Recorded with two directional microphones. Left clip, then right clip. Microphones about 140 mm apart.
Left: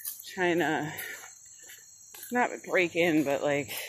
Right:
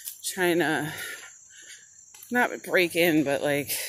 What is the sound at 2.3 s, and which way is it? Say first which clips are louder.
Speech: right 3 dB; 50° right (ahead or behind).